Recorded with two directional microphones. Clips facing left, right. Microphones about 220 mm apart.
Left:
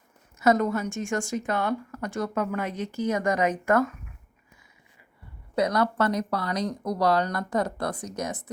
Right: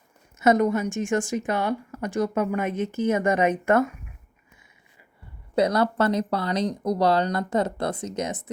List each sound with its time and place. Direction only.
0.3 s a woman's voice: 20° right (ahead or behind)
5.5 s a woman's voice: 30° right (ahead or behind)